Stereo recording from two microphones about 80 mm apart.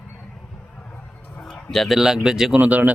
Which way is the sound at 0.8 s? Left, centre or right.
Centre.